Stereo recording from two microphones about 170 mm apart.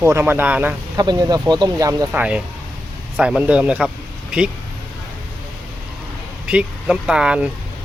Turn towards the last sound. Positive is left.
turn(degrees=-5)  # may be behind; listen again after turning